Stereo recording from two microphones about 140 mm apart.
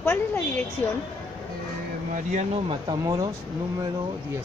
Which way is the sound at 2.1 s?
60° right (ahead or behind).